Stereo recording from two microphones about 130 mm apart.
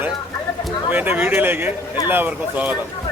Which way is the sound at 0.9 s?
15° right (ahead or behind).